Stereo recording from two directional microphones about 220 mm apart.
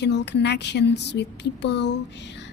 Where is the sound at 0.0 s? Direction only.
50° left (ahead or behind).